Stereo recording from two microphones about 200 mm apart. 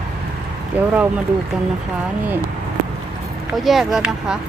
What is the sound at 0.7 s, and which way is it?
Speech, 10° right (ahead or behind).